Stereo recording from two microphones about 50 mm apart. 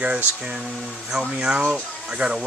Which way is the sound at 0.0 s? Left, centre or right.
Right.